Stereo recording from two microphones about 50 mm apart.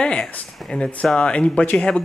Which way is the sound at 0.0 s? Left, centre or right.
Centre.